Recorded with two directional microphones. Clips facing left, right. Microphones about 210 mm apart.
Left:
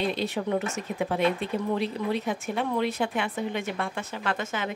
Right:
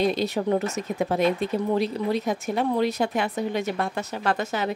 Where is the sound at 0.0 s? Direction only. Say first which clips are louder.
Right 5 dB; 40° right (ahead or behind).